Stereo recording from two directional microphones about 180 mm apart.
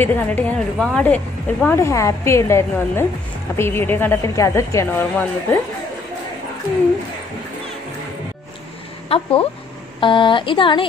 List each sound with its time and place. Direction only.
0.0 s a woman's voice: 10° left (ahead or behind)
9.1 s speech: 30° left (ahead or behind)